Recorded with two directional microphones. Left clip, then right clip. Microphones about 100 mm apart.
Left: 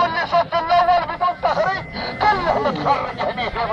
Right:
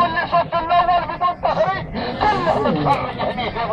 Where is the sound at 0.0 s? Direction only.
35° left (ahead or behind).